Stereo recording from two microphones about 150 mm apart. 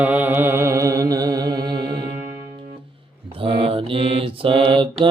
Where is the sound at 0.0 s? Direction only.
10° right (ahead or behind); by 1.7 s 25° right (ahead or behind).